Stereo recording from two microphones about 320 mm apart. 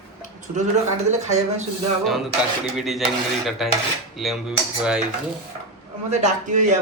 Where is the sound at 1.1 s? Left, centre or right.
Right.